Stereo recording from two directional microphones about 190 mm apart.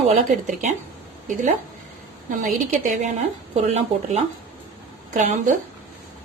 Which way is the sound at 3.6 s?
35° right (ahead or behind).